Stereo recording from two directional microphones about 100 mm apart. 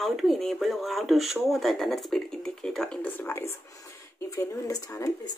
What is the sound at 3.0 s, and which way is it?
Speech, 20° left (ahead or behind).